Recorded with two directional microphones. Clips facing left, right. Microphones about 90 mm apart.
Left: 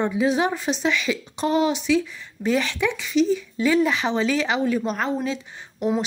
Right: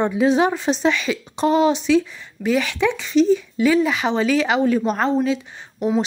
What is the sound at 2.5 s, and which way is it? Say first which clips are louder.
Speech: right 3 dB; 15° right (ahead or behind).